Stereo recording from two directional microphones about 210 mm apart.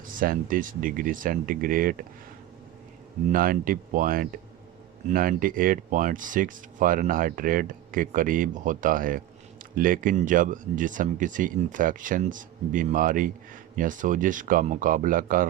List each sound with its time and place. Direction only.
0.2 s speech: 40° right (ahead or behind)
3.2 s speech: 45° right (ahead or behind)